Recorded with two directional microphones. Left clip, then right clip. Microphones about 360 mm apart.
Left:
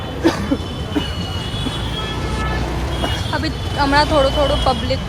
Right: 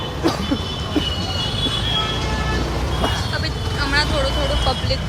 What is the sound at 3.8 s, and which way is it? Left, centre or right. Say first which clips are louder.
Speech: left 5 dB; centre.